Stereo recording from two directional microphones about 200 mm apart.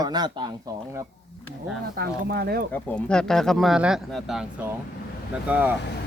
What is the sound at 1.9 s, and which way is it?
Speech, 50° right (ahead or behind).